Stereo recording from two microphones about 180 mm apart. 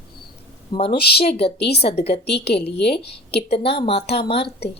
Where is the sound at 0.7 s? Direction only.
25° left (ahead or behind).